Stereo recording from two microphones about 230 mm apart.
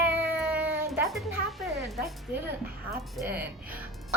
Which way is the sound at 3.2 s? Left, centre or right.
Centre.